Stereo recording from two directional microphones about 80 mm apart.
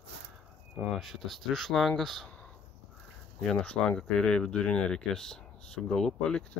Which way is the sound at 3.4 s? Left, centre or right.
Centre.